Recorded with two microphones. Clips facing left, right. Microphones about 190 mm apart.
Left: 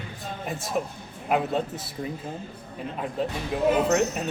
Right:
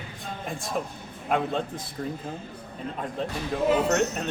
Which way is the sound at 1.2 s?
5° left (ahead or behind).